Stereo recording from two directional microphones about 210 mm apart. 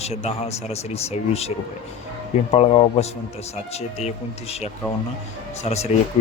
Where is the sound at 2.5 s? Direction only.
30° left (ahead or behind).